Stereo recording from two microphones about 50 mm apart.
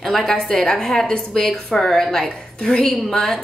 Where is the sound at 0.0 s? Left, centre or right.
Centre.